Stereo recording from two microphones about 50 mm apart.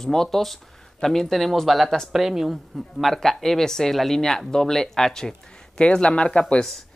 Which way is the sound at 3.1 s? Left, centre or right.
Centre.